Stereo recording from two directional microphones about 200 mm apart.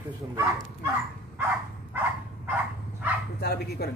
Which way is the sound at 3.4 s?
55° left (ahead or behind).